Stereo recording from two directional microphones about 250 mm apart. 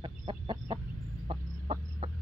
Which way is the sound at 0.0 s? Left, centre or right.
Centre.